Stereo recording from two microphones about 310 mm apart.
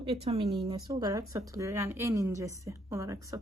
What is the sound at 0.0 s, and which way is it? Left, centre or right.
A woman's voice, centre.